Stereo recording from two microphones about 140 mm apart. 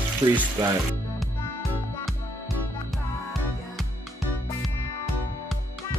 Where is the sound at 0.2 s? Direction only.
30° right (ahead or behind).